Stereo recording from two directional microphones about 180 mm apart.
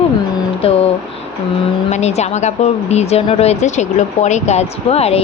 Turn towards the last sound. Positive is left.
turn(degrees=35)  # may be behind; listen again after turning